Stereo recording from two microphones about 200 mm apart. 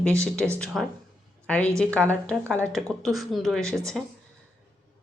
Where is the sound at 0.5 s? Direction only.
5° left (ahead or behind).